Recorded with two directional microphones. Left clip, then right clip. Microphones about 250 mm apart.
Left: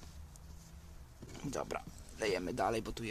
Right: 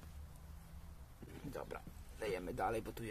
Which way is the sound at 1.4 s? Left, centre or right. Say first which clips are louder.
Left 8 dB; left.